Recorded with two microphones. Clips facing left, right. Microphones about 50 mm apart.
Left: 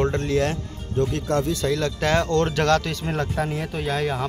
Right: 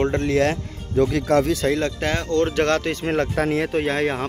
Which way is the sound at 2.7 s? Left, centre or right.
Right.